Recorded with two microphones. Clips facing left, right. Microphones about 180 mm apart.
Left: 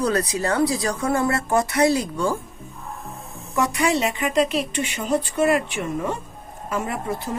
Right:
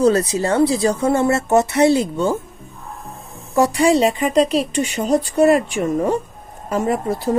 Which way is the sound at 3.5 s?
35° right (ahead or behind).